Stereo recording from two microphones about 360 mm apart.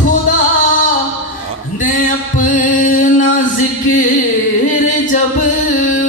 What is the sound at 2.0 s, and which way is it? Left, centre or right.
Music, left.